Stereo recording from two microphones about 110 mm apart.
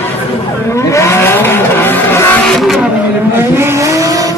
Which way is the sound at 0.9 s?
25° left (ahead or behind).